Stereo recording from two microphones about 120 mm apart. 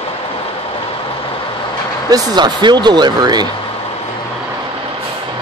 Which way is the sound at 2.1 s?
35° right (ahead or behind).